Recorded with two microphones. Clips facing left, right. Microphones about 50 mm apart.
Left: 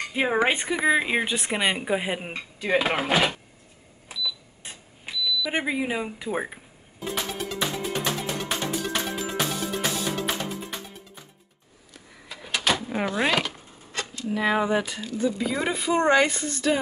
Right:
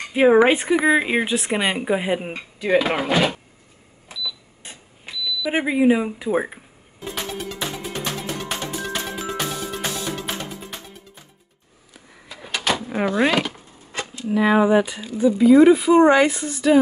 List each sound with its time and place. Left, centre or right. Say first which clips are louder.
0.1 s speech: right 9 dB; centre
2.9 s speech: right 3 dB; centre
4.1 s a sound: even; centre
5.5 s speech: right 12 dB; centre
7.1 s music: right 1 dB; centre
11.9 s a sound: right 1 dB; centre
12.4 s door: right 2 dB; centre
13.9 s a sound: right 3 dB; centre
14.3 s speech: right 7 dB; centre